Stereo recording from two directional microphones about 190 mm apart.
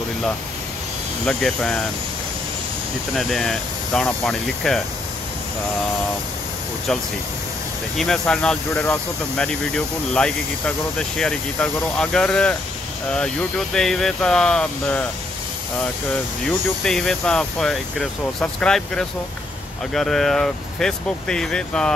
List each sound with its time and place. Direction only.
1.2 s speech: 5° left (ahead or behind)
3.2 s speech: centre (ahead or behind)
8.0 s speech: 5° left (ahead or behind)
16.4 s speech: centre (ahead or behind)